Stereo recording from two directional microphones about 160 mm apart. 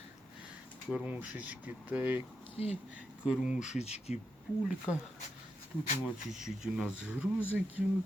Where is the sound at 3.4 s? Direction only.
50° left (ahead or behind).